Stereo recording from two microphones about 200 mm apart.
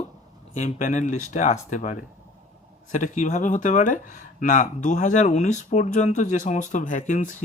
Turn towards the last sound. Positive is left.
turn(degrees=35)  # may be behind; listen again after turning